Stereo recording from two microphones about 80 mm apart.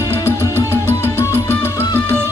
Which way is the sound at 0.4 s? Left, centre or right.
Left.